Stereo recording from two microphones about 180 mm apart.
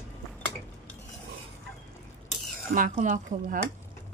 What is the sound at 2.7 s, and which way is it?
Speech, 45° right (ahead or behind).